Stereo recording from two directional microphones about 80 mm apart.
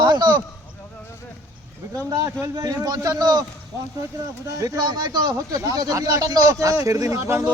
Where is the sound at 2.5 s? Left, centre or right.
Right.